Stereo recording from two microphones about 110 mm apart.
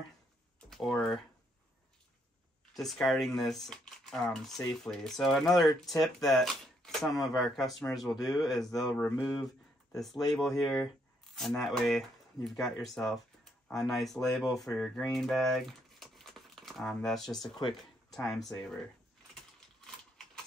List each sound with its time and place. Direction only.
0.6 s speech: 5° left (ahead or behind)
2.8 s speech: 5° left (ahead or behind)
8.3 s speech: 35° left (ahead or behind)
9.2 s speech: centre (ahead or behind)
17.3 s speech: 40° left (ahead or behind)
18.1 s speech: centre (ahead or behind)